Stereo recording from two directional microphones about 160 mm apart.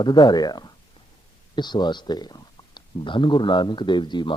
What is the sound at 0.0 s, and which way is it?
Speech, 30° left (ahead or behind).